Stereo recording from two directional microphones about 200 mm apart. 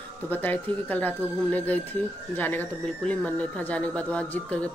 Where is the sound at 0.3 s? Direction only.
10° left (ahead or behind).